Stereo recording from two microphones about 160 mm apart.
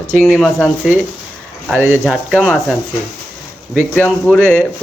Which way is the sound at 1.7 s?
15° right (ahead or behind).